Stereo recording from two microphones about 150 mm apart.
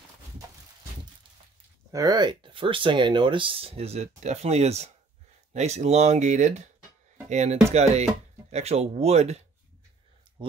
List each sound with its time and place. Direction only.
1.9 s speech: 25° right (ahead or behind); by 9.4 s 45° right (ahead or behind)